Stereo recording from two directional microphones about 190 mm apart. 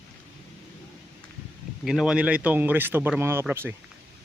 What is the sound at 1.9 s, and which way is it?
Speech, 5° right (ahead or behind).